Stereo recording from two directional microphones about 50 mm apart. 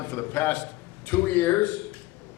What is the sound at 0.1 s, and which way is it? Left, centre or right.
A man's voice, left.